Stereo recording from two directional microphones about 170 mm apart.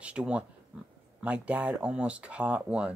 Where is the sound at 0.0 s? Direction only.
5° right (ahead or behind).